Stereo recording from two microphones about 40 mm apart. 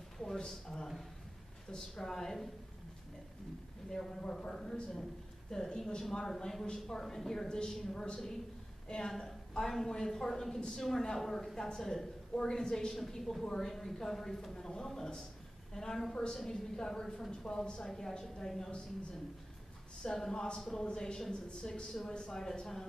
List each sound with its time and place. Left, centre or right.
0.2 s a sound: centre
1.7 s a woman's voice: centre
3.9 s a man's voice: centre
13.4 s a man's voice: centre
13.7 s a woman's voice: centre
14.5 s a woman's voice: centre
20.0 s a woman's voice: centre
22.1 s a man's voice: left